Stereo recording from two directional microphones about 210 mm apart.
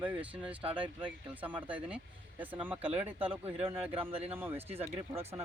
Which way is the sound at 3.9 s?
25° right (ahead or behind).